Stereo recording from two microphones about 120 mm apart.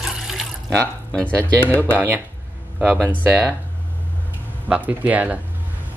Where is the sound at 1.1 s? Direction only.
10° left (ahead or behind).